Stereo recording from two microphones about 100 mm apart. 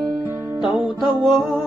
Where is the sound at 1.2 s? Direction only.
Centre (ahead or behind).